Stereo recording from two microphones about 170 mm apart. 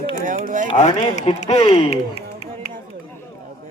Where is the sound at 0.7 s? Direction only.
40° left (ahead or behind).